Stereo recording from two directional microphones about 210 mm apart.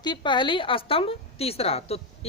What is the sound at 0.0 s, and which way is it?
A woman's voice, 20° left (ahead or behind).